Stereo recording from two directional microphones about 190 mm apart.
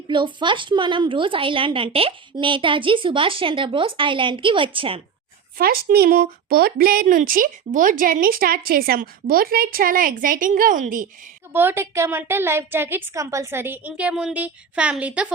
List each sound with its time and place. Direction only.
0.1 s a woman's voice: 25° right (ahead or behind)
5.5 s speech: 50° right (ahead or behind)
11.5 s a woman's voice: 10° right (ahead or behind)